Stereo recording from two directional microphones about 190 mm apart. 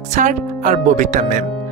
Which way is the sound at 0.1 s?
40° right (ahead or behind).